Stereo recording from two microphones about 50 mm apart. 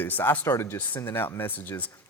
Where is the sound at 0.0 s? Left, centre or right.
Left.